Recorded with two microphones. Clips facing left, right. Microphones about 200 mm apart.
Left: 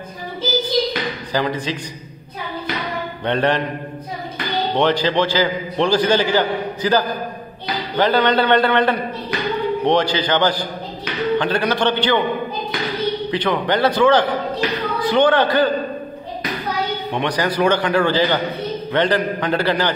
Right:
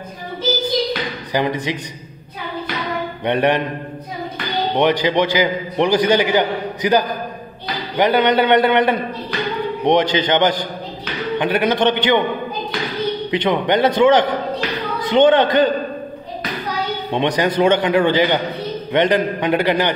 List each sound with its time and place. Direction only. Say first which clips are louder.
1.3 s a man's voice: right 2 dB; 20° right (ahead or behind)
3.3 s a man's voice: right 2 dB; 15° right (ahead or behind)
4.7 s a man's voice: right 1 dB; 15° right (ahead or behind)
13.3 s a man's voice: right 4 dB; 20° right (ahead or behind)
17.1 s a man's voice: right 5 dB; 20° right (ahead or behind)